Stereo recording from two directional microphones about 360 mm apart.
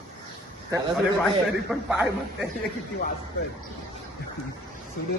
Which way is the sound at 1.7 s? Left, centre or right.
Centre.